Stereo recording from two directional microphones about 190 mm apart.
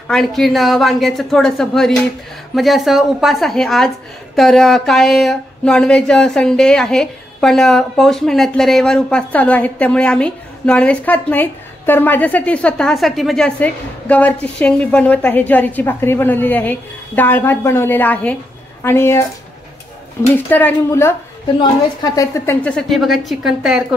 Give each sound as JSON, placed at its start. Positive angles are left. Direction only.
{"t": 0.1, "sound": "speech", "side_deg": 0}
{"t": 20.3, "sound": "speech", "side_deg": 10}